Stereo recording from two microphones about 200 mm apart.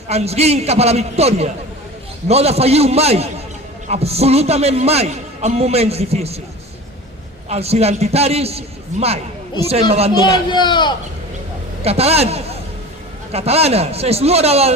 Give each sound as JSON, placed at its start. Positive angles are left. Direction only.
{"t": 0.1, "sound": "a man's voice", "side_deg": -30}
{"t": 7.5, "sound": "a man's voice", "side_deg": -30}
{"t": 10.5, "sound": "a man's voice", "side_deg": 20}
{"t": 11.8, "sound": "a man's voice", "side_deg": -30}